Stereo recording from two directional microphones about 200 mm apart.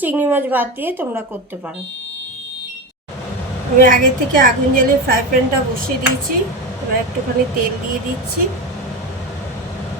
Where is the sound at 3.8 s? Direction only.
45° right (ahead or behind).